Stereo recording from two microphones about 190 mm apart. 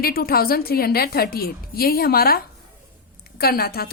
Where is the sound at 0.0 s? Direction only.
50° left (ahead or behind).